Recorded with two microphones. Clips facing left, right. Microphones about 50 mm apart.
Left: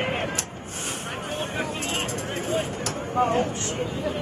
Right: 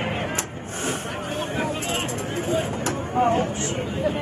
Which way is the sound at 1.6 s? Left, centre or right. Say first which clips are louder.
Right 3 dB; centre.